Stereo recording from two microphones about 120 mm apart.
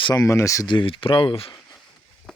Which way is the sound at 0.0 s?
30° left (ahead or behind).